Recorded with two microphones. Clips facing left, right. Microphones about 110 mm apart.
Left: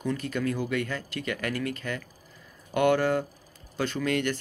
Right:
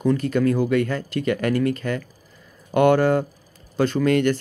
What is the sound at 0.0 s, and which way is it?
Speech, 45° right (ahead or behind).